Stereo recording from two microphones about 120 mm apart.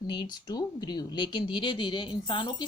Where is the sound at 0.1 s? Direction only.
35° left (ahead or behind).